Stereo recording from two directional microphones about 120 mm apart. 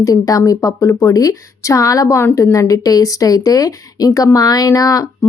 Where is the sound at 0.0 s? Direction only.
30° left (ahead or behind).